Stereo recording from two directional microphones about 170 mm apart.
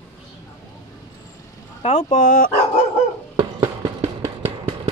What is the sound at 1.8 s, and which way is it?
Speech, 40° left (ahead or behind).